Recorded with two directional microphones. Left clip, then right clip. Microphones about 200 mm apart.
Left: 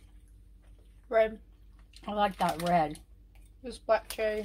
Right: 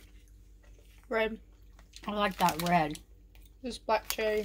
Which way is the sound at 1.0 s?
30° right (ahead or behind).